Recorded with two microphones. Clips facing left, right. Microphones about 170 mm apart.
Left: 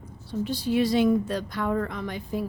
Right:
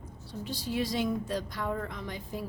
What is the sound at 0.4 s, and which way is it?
A woman's voice, 70° left (ahead or behind).